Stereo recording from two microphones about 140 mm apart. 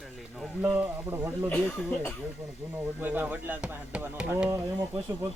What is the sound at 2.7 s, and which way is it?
Speech, 10° right (ahead or behind).